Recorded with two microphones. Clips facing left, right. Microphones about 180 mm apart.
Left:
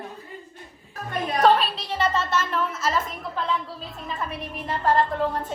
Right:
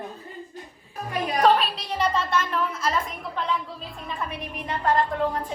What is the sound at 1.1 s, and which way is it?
A woman's voice, 5° right (ahead or behind).